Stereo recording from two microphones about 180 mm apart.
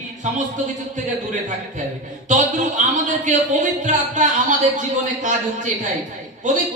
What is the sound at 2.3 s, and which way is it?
A man's voice, 45° right (ahead or behind).